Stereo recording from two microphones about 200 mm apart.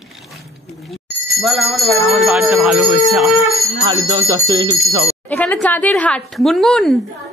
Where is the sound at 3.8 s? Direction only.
15° right (ahead or behind).